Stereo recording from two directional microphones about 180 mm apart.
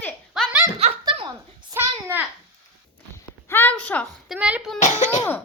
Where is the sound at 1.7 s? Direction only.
15° right (ahead or behind).